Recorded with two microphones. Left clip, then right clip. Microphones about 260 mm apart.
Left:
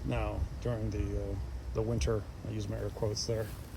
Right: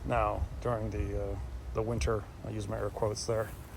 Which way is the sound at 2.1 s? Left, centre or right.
Right.